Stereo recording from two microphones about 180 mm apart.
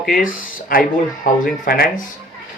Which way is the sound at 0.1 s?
50° left (ahead or behind).